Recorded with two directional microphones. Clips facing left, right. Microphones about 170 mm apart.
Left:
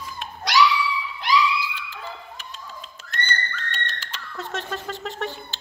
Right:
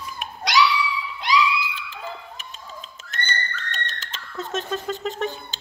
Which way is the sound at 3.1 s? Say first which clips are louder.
Left 1 dB; 20° right (ahead or behind).